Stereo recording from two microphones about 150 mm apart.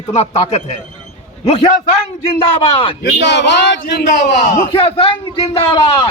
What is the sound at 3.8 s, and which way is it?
Speech, 90° left.